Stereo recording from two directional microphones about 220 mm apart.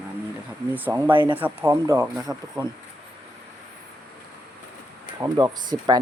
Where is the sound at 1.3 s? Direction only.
10° right (ahead or behind).